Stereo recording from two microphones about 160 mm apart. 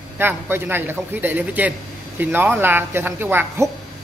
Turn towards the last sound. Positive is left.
turn(degrees=-15)  # may be behind; listen again after turning